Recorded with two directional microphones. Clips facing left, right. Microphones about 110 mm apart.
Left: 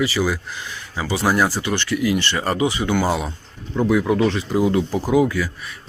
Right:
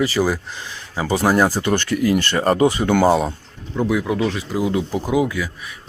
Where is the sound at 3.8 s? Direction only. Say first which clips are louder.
Left 2 dB; 5° right (ahead or behind).